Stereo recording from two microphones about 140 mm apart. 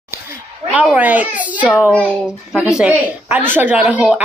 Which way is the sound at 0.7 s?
10° right (ahead or behind).